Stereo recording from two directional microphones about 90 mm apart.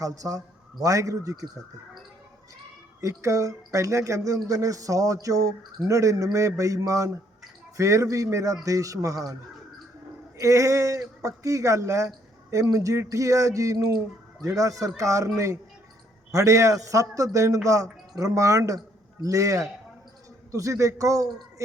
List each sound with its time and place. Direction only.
0.0 s speech: 40° right (ahead or behind)
3.0 s speech: 35° right (ahead or behind)
10.3 s speech: 35° right (ahead or behind)
16.3 s speech: 35° right (ahead or behind)